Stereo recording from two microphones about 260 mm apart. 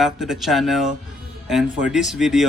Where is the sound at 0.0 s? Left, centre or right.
Centre.